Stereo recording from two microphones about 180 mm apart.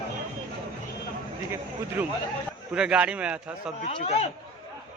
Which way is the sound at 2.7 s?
5° right (ahead or behind).